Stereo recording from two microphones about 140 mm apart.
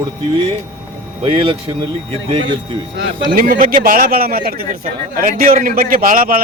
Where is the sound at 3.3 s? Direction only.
75° right (ahead or behind).